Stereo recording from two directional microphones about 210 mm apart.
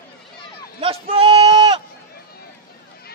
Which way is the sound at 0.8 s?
25° right (ahead or behind).